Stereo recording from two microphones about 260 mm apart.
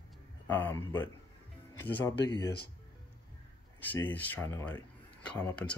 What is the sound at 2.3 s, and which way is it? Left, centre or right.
Speech, centre.